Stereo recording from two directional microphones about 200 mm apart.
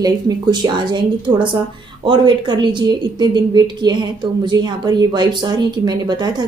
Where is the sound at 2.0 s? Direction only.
25° right (ahead or behind).